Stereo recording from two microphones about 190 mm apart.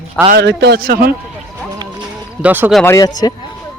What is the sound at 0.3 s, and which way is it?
Speech, 60° right (ahead or behind).